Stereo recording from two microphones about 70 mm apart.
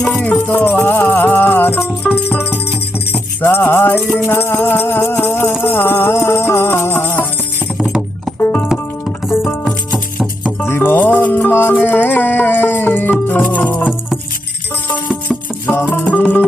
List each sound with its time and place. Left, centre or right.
0.2 s music: left
8.4 s music: left
10.6 s music: left; by 16.4 s centre